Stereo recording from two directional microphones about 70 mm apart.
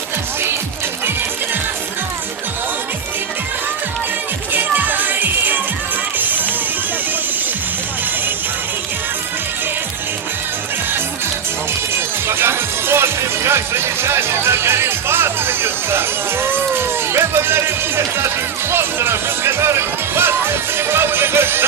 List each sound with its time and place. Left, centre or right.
4.5 s music: right
11.9 s music: right